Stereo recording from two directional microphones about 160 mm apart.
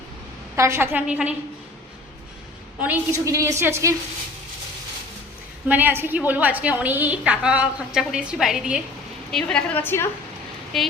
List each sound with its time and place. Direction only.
0.5 s a woman's voice: 15° right (ahead or behind)
2.8 s a woman's voice: 15° right (ahead or behind)
5.6 s a woman's voice: 10° right (ahead or behind)
9.3 s a woman's voice: 5° left (ahead or behind)
10.7 s speech: centre (ahead or behind)